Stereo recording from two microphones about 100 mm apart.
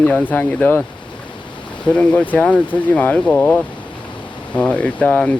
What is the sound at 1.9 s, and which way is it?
Speech, 10° left (ahead or behind).